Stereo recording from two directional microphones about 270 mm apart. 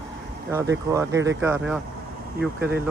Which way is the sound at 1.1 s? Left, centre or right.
Right.